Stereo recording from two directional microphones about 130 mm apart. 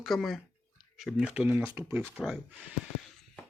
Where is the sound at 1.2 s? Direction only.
10° right (ahead or behind).